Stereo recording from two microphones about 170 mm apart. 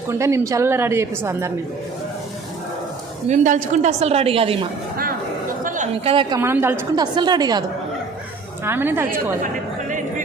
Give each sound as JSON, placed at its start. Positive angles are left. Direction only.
{"t": 0.1, "sound": "a woman's voice", "side_deg": -15}
{"t": 3.2, "sound": "a woman's voice", "side_deg": -50}
{"t": 5.6, "sound": "chatter", "side_deg": -45}
{"t": 6.4, "sound": "a woman's voice", "side_deg": -15}
{"t": 6.9, "sound": "a woman's voice", "side_deg": -25}
{"t": 8.6, "sound": "a woman's voice", "side_deg": -15}